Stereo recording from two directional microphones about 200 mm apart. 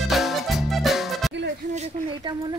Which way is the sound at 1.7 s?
30° right (ahead or behind).